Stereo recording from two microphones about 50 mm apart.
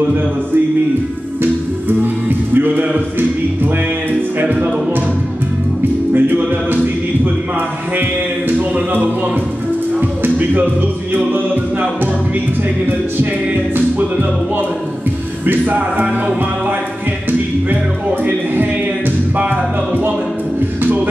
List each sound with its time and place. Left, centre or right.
2.5 s music: right
6.1 s music: right
8.0 s music: right
13.7 s music: right
15.4 s music: right
18.2 s music: right